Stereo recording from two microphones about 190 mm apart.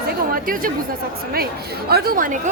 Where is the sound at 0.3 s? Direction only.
50° right (ahead or behind).